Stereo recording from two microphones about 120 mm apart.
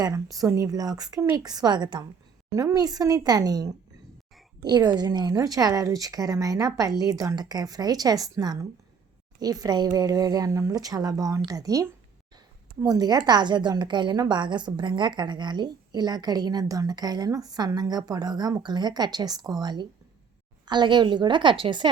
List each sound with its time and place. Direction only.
0.0 s a woman's voice: 30° right (ahead or behind)